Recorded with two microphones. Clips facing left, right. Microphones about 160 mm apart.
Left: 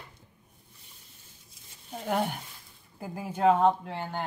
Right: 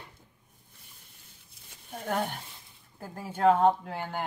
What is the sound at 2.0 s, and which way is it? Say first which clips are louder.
Cutlery: left 2 dB; 10° left (ahead or behind).